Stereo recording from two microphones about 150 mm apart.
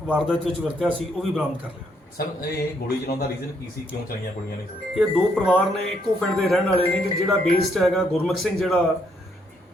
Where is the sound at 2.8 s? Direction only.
90° left.